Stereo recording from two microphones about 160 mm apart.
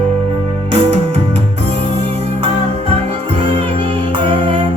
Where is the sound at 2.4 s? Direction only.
40° right (ahead or behind).